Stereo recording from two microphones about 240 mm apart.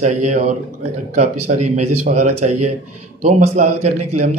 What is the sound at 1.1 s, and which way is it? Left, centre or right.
Speech, right.